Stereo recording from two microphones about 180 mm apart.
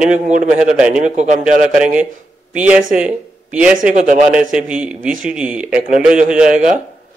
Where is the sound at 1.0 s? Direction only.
40° right (ahead or behind).